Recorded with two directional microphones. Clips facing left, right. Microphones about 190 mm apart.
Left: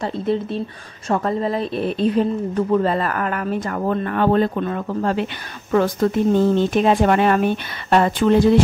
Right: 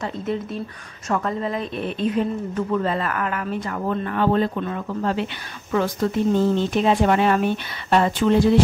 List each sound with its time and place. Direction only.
0.0 s a woman's voice: 30° left (ahead or behind); by 8.4 s 55° left (ahead or behind)